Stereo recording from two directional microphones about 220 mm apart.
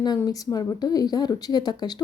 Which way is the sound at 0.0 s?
15° left (ahead or behind).